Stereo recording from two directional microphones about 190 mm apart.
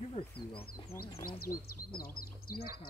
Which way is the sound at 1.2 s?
50° left (ahead or behind).